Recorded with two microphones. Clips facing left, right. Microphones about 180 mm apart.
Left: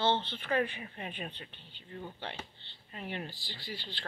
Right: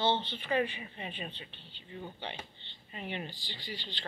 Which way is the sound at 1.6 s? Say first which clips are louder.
Right 1 dB; 45° left (ahead or behind).